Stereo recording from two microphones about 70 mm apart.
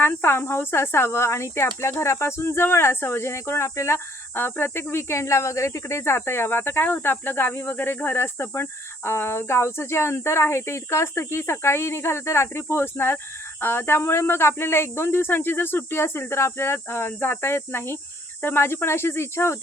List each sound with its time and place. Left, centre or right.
0.0 s speech: left